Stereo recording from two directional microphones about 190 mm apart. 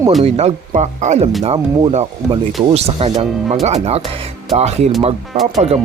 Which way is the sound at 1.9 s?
35° right (ahead or behind).